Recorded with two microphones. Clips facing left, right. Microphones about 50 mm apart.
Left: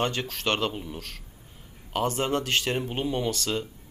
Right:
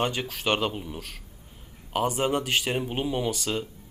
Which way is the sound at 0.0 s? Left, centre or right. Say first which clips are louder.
Even; centre.